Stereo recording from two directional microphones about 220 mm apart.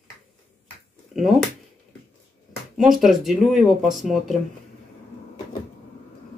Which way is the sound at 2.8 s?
Centre (ahead or behind).